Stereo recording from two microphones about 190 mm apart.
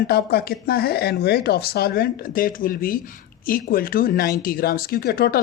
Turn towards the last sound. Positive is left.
turn(degrees=55)  # may be behind; listen again after turning